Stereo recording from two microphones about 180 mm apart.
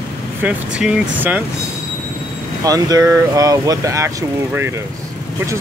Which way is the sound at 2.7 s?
20° right (ahead or behind).